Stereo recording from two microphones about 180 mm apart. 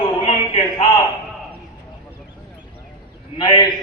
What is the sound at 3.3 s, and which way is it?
Speech, 25° left (ahead or behind).